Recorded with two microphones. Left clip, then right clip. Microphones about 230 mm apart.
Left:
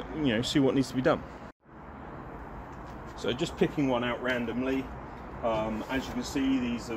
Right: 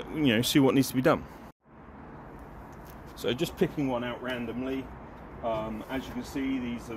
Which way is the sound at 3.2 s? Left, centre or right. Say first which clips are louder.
Even; right.